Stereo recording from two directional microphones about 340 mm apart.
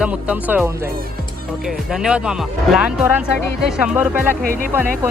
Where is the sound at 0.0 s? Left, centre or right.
Centre.